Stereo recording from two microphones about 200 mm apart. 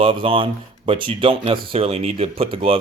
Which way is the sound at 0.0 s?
25° right (ahead or behind).